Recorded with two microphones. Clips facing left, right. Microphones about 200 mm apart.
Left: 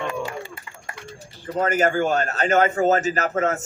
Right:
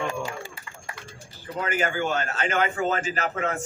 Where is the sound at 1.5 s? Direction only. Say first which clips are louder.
Left 6 dB; 45° left (ahead or behind).